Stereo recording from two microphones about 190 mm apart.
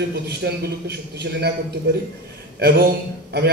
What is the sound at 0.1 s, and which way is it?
Speech, 60° right (ahead or behind).